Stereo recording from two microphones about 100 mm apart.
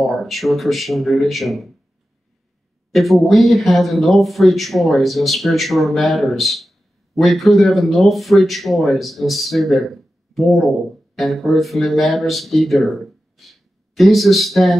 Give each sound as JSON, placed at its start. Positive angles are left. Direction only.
{"t": 0.0, "sound": "speech", "side_deg": 0}
{"t": 2.9, "sound": "speech", "side_deg": 0}